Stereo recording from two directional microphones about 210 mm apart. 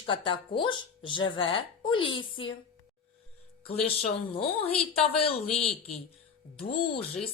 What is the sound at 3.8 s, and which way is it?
Speech, 25° left (ahead or behind).